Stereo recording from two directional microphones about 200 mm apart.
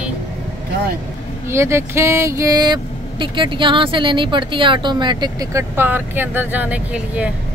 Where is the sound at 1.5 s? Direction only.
15° right (ahead or behind).